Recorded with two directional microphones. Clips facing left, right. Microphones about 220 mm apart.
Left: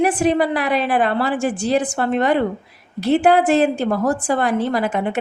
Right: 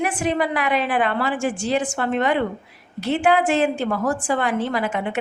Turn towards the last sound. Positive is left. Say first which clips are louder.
# left 4 dB
turn(degrees=40)  # may be behind; listen again after turning